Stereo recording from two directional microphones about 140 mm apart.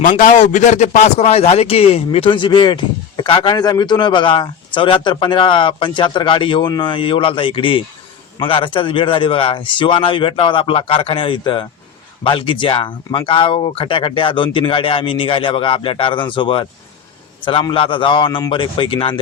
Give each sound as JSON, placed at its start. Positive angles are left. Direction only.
{"t": 0.0, "sound": "speech", "side_deg": 70}